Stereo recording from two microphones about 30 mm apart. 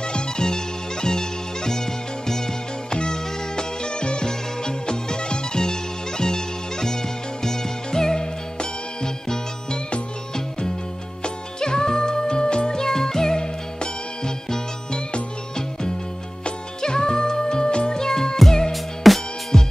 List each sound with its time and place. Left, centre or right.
0.0 s music: left
2.9 s music: left
11.2 s music: left
12.8 s music: centre
16.4 s music: left
18.0 s music: centre
18.7 s music: centre
19.5 s music: centre